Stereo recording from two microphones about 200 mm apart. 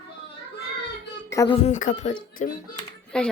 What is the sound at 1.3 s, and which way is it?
Speech, 15° left (ahead or behind).